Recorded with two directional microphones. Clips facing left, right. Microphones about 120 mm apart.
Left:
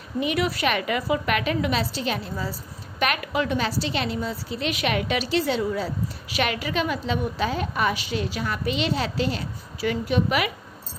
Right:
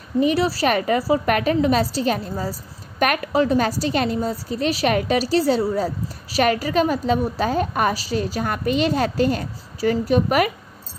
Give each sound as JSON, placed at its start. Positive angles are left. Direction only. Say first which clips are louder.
{"t": 0.2, "sound": "a woman's voice", "louder": "right 5 dB", "side_deg": -35}